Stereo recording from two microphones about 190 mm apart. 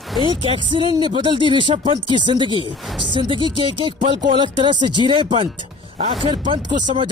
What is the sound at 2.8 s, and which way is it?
Speech, centre (ahead or behind).